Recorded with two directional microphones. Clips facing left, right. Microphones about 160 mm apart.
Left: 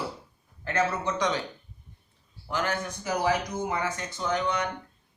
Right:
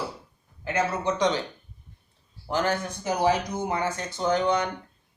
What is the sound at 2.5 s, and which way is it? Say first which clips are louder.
A man's voice: right 4 dB; 30° right (ahead or behind).